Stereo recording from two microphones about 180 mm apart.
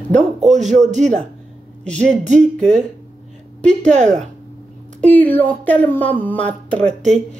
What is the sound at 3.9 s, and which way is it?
Speech, 40° right (ahead or behind).